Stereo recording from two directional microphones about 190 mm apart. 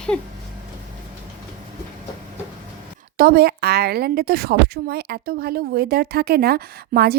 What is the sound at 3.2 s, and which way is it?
A woman's voice, 55° right (ahead or behind).